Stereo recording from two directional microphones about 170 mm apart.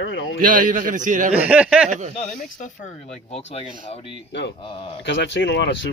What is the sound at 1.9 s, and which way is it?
Speech, 45° right (ahead or behind).